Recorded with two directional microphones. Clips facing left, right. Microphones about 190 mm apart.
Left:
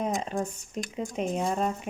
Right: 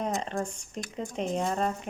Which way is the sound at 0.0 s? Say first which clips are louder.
Left 1 dB; 5° left (ahead or behind).